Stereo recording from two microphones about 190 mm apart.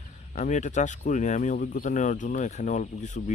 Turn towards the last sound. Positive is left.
turn(degrees=40)  # may be behind; listen again after turning